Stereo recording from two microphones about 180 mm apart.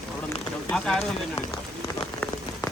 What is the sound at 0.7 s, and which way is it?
Speech, 5° left (ahead or behind).